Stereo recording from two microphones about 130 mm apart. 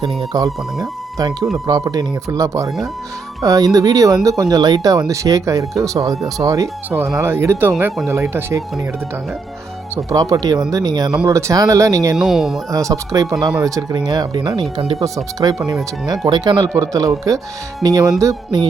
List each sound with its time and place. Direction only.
0.0 s speech: centre (ahead or behind)
0.3 s speech: 25° right (ahead or behind)
9.9 s speech: 25° right (ahead or behind)
12.1 s speech: centre (ahead or behind)
12.7 s speech: 25° right (ahead or behind)